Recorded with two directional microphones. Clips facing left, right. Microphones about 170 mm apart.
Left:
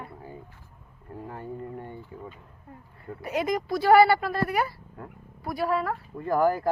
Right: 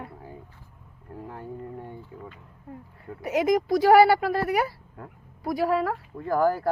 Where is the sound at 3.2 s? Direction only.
90° right.